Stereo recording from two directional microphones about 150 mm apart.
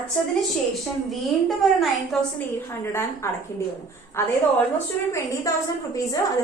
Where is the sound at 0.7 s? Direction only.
Centre (ahead or behind).